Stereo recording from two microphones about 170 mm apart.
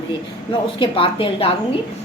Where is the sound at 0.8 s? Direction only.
30° left (ahead or behind).